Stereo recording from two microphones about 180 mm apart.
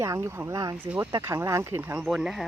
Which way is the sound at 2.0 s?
Centre (ahead or behind).